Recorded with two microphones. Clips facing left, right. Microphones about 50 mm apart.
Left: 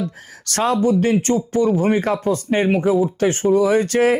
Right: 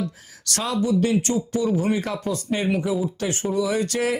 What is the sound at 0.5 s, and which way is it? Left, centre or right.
Speech, left.